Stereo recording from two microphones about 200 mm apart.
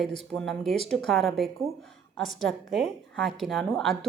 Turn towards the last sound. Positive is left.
turn(degrees=0)  # may be behind; listen again after turning